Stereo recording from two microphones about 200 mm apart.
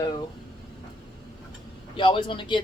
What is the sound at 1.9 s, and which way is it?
Speech, 25° left (ahead or behind).